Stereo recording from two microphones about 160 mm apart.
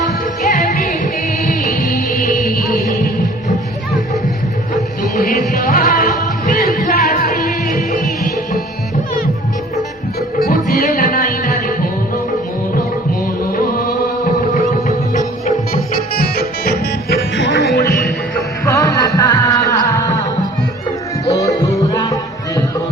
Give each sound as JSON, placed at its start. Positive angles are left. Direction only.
{"t": 0.0, "sound": "music", "side_deg": 55}
{"t": 5.1, "sound": "music", "side_deg": 55}
{"t": 10.2, "sound": "music", "side_deg": 70}
{"t": 13.5, "sound": "music", "side_deg": 65}
{"t": 16.1, "sound": "music", "side_deg": 75}
{"t": 17.3, "sound": "music", "side_deg": 90}
{"t": 18.6, "sound": "music", "side_deg": 20}
{"t": 21.2, "sound": "music", "side_deg": 20}